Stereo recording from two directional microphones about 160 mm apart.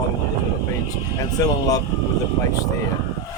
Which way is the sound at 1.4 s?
20° left (ahead or behind).